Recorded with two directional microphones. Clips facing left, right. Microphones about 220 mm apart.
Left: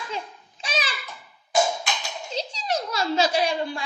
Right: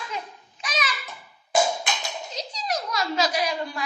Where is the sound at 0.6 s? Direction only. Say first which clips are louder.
Left 1 dB; 30° left (ahead or behind).